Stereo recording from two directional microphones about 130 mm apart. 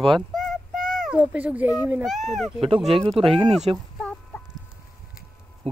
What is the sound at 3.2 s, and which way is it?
Speech, 45° right (ahead or behind).